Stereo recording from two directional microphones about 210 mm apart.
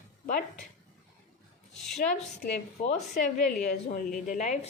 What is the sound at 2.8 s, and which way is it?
A woman's voice, 30° left (ahead or behind).